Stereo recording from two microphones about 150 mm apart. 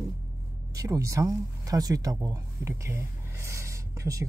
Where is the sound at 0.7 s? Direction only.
20° right (ahead or behind).